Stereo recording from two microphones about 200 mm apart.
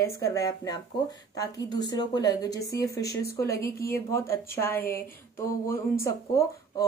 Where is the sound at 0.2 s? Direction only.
15° left (ahead or behind).